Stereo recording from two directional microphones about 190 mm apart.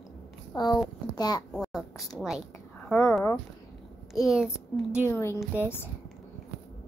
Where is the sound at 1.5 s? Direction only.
Centre (ahead or behind).